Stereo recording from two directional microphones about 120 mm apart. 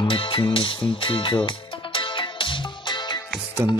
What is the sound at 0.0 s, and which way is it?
Music, 45° left (ahead or behind).